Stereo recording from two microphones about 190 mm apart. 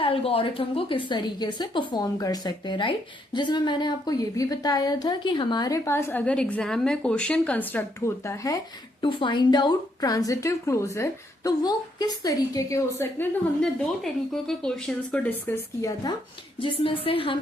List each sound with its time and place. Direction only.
0.0 s a woman's voice: 30° left (ahead or behind)
13.6 s speech: 5° left (ahead or behind)
16.6 s a woman's voice: 30° left (ahead or behind)